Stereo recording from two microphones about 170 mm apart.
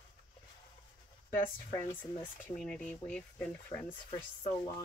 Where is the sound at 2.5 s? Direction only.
5° left (ahead or behind).